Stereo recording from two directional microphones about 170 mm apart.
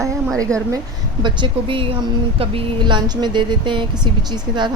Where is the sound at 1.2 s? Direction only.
30° right (ahead or behind).